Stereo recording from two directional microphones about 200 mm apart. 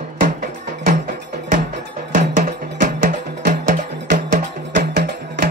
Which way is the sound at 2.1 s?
40° right (ahead or behind).